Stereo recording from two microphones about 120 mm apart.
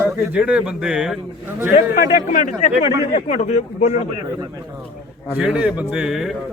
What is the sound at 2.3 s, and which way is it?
Speech, 90° left.